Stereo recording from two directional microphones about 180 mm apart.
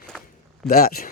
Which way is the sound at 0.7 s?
55° left (ahead or behind).